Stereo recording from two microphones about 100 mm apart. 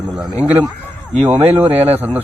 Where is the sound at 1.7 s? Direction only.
90° right.